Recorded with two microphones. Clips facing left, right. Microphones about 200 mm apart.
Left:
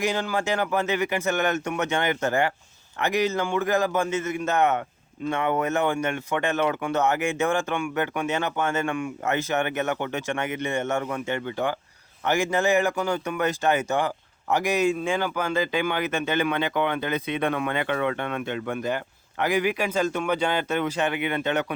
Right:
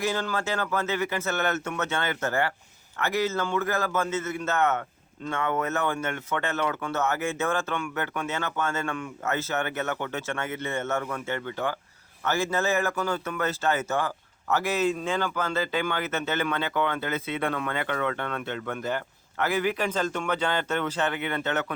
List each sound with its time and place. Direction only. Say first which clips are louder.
0.0 s speech: left 2 dB; 15° left (ahead or behind)